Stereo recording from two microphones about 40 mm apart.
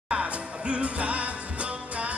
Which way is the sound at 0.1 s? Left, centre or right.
Right.